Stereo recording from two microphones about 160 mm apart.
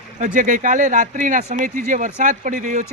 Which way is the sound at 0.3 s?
55° right (ahead or behind).